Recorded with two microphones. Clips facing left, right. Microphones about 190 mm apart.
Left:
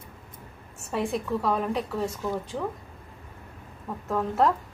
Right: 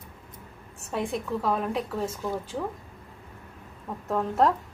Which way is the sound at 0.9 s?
Centre (ahead or behind).